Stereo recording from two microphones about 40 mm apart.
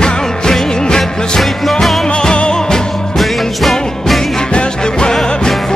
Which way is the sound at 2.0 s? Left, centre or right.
Left.